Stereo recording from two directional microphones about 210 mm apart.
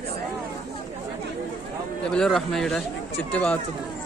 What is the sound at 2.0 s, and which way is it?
Speech, 5° left (ahead or behind).